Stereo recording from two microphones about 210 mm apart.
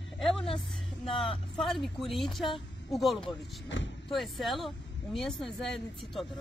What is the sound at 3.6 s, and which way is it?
Speech, 60° left (ahead or behind).